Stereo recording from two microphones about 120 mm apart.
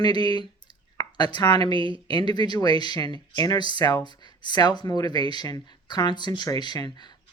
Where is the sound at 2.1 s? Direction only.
35° left (ahead or behind).